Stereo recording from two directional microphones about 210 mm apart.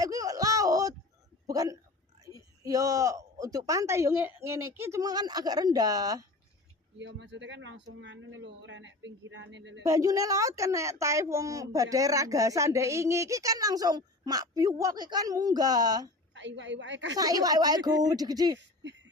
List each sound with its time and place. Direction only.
0.0 s a sound: 15° right (ahead or behind)
2.2 s speech: 15° right (ahead or behind)
7.0 s speech: 55° right (ahead or behind)
9.8 s speech: 15° right (ahead or behind)
16.3 s speech: 60° right (ahead or behind)
17.2 s speech: 15° right (ahead or behind)